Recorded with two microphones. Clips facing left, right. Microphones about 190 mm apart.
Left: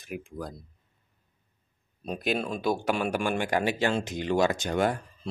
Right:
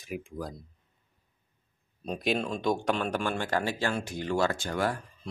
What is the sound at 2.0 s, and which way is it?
Speech, 5° left (ahead or behind).